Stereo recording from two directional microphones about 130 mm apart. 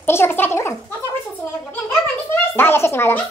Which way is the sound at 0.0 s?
15° left (ahead or behind).